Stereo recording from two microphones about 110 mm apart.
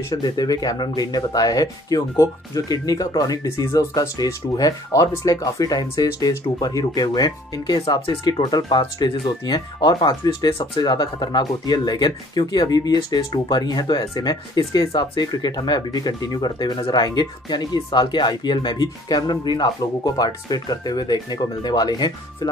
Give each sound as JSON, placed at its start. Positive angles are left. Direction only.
{"t": 0.1, "sound": "speech", "side_deg": 35}